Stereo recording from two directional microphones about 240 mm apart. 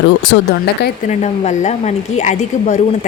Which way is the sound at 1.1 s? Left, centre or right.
Left.